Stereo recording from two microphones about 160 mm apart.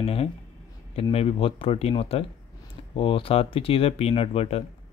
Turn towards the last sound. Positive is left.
turn(degrees=35)  # may be behind; listen again after turning